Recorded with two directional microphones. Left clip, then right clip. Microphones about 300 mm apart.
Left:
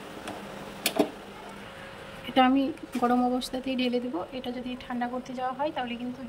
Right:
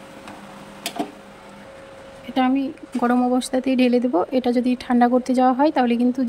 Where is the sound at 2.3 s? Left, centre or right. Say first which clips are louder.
Right 2 dB; centre.